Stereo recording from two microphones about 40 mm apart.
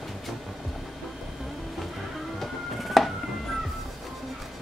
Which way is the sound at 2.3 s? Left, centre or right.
Centre.